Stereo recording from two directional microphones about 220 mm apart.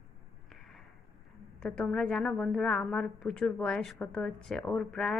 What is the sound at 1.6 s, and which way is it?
A woman's voice, 5° left (ahead or behind).